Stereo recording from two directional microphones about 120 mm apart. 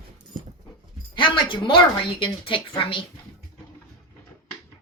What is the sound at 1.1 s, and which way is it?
Speech, 45° left (ahead or behind).